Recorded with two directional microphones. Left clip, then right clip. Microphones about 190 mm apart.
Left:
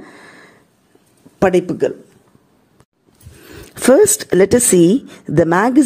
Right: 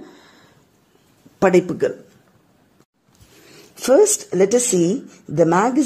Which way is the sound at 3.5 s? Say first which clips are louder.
Left 4 dB; 30° left (ahead or behind).